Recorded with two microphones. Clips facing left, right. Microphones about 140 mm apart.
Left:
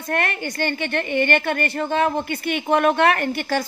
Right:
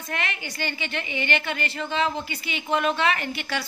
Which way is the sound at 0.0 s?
50° left (ahead or behind).